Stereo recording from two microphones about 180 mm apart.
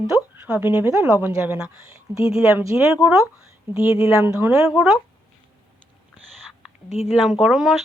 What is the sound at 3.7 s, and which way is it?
Speech, 30° left (ahead or behind).